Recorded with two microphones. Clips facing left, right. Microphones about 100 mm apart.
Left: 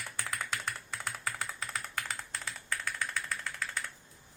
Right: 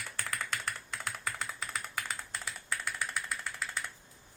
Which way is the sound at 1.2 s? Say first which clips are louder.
Left 1 dB; centre (ahead or behind).